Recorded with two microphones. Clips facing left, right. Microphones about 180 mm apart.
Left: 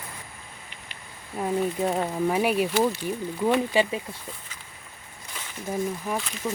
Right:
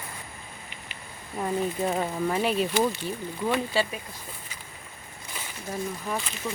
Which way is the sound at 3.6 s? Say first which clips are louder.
Left 4 dB; 15° left (ahead or behind).